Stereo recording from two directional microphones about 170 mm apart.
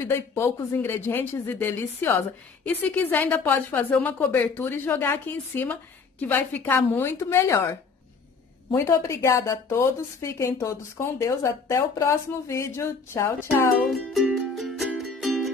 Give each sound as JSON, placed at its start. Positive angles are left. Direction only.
{"t": 0.0, "sound": "speech", "side_deg": 15}
{"t": 8.7, "sound": "speech", "side_deg": 15}
{"t": 13.9, "sound": "music", "side_deg": 0}